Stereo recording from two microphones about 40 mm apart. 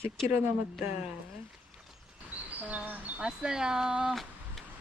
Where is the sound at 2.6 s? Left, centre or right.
Right.